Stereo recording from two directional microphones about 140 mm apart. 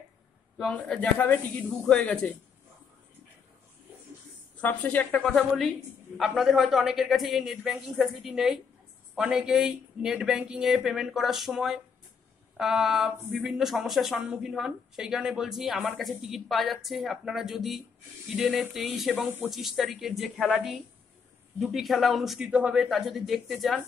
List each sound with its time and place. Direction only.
0.6 s speech: 5° left (ahead or behind)
4.6 s speech: 10° left (ahead or behind)